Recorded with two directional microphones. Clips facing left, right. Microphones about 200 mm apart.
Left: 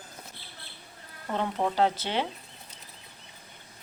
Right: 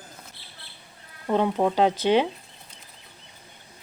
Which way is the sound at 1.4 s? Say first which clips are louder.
Right 4 dB; 15° right (ahead or behind).